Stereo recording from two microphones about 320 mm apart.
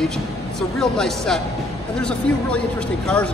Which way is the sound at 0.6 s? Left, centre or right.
Centre.